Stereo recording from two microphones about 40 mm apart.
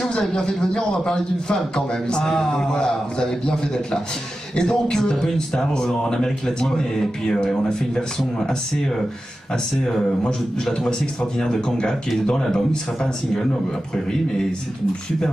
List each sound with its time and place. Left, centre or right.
0.0 s a man's voice: centre
10.9 s speech: centre